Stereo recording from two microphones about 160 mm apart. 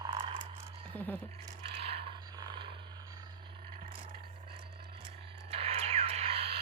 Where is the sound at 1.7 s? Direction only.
35° right (ahead or behind).